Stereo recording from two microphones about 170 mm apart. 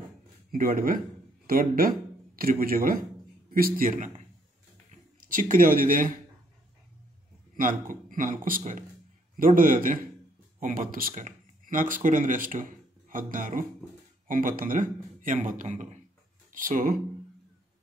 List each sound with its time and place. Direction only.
0.5 s speech: 60° right (ahead or behind)
5.3 s a man's voice: 50° right (ahead or behind)
7.5 s a man's voice: 50° right (ahead or behind)